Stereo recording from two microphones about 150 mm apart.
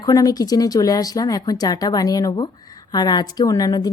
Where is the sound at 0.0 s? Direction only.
25° left (ahead or behind).